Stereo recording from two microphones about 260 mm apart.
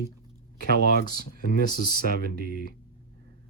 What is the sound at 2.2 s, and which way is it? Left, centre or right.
Speech, right.